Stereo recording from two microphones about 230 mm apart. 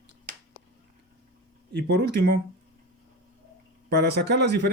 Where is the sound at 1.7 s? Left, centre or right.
Right.